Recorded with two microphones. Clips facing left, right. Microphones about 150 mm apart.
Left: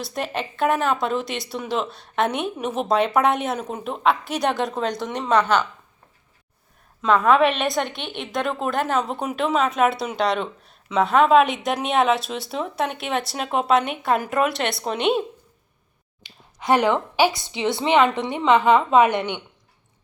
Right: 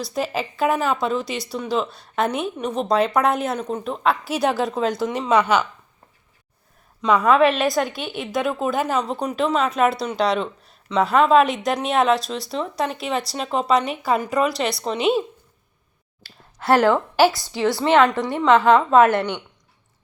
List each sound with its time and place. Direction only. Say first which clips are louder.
0.0 s a woman's voice: right 3 dB; centre (ahead or behind)
7.0 s a woman's voice: right 1 dB; centre (ahead or behind)
16.2 s a woman's voice: right 2 dB; 15° left (ahead or behind)